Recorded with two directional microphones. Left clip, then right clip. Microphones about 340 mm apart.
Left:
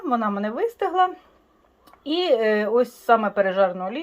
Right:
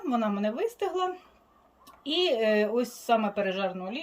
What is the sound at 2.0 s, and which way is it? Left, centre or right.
Speech, left.